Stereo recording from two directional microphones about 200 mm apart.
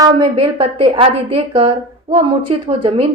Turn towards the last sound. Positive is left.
turn(degrees=-30)  # may be behind; listen again after turning